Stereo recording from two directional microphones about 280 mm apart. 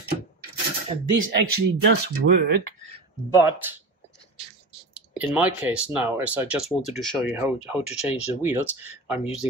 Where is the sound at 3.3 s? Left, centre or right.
Centre.